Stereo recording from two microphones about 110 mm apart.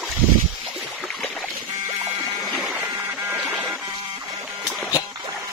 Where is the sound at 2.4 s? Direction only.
Centre (ahead or behind).